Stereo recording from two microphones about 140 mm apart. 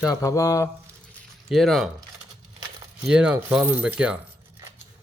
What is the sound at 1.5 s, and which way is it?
Speech, centre (ahead or behind).